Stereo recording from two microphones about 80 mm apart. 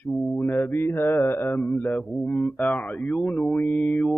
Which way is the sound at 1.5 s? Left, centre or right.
Centre.